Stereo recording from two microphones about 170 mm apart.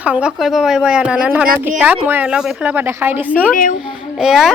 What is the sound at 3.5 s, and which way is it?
Speech, 50° left (ahead or behind).